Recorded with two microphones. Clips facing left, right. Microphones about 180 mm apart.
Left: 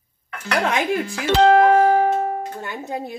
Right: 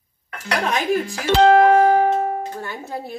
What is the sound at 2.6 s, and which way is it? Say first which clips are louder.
Speech: left 2 dB; 20° left (ahead or behind).